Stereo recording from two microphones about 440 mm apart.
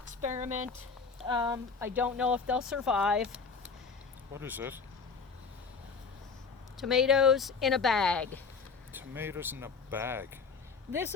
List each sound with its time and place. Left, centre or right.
0.1 s a sound: centre
1.2 s speech: centre
6.7 s speech: centre